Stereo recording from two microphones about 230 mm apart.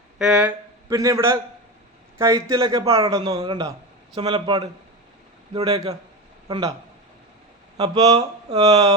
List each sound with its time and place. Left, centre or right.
0.2 s a man's voice: centre; by 5.8 s right
6.5 s a man's voice: centre
7.8 s a man's voice: centre